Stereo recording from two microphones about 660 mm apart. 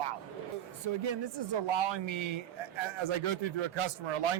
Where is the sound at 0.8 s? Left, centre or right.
Right.